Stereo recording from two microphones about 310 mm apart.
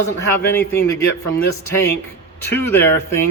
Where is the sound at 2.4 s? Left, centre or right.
Centre.